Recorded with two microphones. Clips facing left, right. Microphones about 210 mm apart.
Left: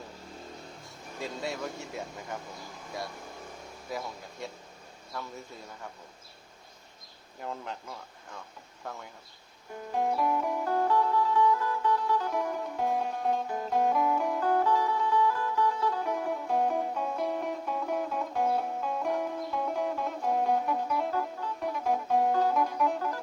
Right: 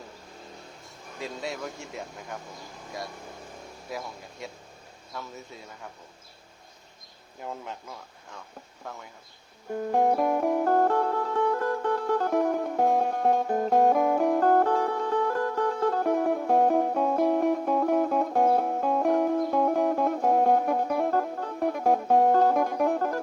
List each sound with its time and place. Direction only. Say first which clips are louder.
1.2 s speech: right 1 dB; centre (ahead or behind)
3.8 s speech: even; centre (ahead or behind)
7.3 s speech: right 1 dB; 5° right (ahead or behind)
9.7 s music: right 6 dB; 50° right (ahead or behind)